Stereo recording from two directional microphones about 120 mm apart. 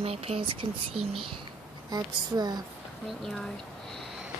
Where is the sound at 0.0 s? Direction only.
55° right (ahead or behind).